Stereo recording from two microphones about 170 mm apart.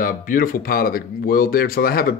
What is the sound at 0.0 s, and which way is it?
Speech, 55° left (ahead or behind).